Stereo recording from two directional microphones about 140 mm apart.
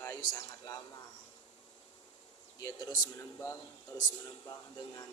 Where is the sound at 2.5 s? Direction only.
25° left (ahead or behind).